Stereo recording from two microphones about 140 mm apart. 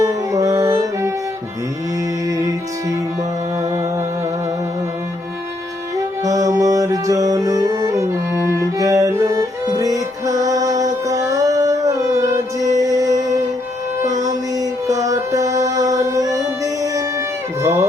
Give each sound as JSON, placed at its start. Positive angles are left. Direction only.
{"t": 0.0, "sound": "music", "side_deg": -25}
{"t": 6.2, "sound": "music", "side_deg": -25}
{"t": 14.1, "sound": "music", "side_deg": -60}
{"t": 14.5, "sound": "music", "side_deg": -25}
{"t": 17.6, "sound": "music", "side_deg": -20}